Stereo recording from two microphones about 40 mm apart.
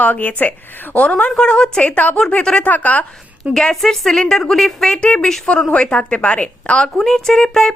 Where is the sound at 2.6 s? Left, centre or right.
Left.